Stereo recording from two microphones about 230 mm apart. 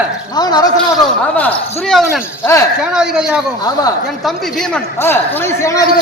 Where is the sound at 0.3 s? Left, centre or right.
Centre.